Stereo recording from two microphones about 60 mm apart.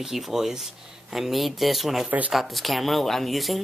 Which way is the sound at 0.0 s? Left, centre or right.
Centre.